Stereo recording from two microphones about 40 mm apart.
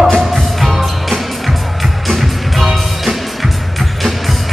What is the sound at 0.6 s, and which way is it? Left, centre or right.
Music, centre.